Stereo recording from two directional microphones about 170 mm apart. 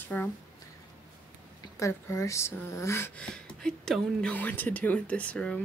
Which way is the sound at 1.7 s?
15° left (ahead or behind).